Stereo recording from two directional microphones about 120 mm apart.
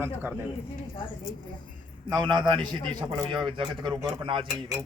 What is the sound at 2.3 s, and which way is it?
A man's voice, 40° right (ahead or behind).